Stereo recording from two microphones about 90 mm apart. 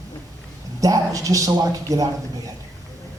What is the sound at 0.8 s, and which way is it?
A man's voice, 40° right (ahead or behind).